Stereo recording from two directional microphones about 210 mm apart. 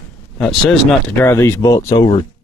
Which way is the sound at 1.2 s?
10° left (ahead or behind).